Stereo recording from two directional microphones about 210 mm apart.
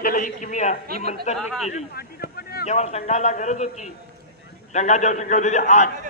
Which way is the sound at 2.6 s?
30° left (ahead or behind).